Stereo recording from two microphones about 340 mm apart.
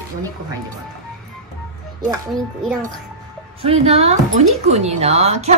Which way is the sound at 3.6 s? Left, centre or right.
Centre.